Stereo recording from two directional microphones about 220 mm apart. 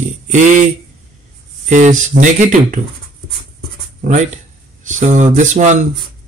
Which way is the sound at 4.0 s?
35° right (ahead or behind).